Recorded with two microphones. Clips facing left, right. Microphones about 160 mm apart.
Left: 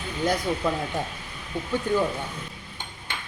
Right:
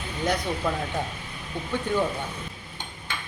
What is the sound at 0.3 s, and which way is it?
Speech, 5° left (ahead or behind).